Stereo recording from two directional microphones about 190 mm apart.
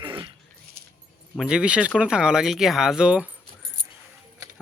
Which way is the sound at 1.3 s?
Centre (ahead or behind).